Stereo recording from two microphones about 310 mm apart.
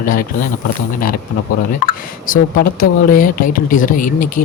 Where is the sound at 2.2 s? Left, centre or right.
Left.